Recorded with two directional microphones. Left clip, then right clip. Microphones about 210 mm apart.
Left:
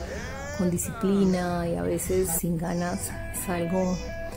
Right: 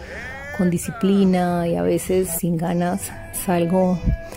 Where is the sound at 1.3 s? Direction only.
45° right (ahead or behind).